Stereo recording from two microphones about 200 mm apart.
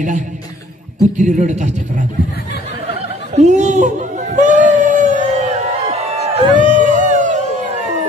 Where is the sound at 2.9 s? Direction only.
35° right (ahead or behind).